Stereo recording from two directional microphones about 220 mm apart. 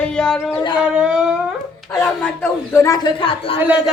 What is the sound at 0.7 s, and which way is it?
A man's voice, 5° right (ahead or behind).